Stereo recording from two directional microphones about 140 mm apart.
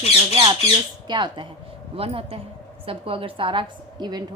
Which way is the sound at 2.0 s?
45° right (ahead or behind).